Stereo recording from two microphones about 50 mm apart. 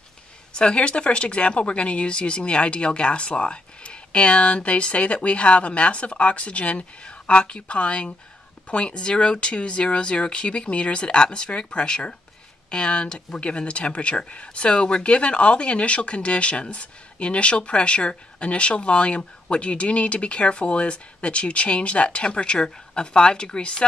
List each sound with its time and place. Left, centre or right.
0.5 s speech: centre